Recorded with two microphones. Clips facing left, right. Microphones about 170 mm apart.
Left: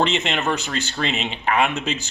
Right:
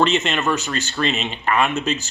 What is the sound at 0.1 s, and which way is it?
Speech, 15° left (ahead or behind).